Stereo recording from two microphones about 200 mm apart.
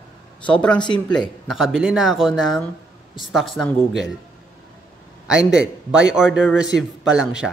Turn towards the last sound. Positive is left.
turn(degrees=-5)  # may be behind; listen again after turning